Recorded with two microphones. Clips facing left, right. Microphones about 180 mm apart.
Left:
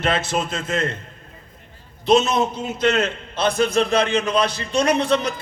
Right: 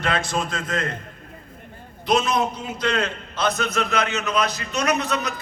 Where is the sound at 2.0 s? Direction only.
25° left (ahead or behind).